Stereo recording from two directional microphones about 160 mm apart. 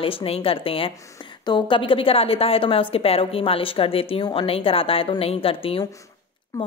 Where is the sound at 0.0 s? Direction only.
35° left (ahead or behind).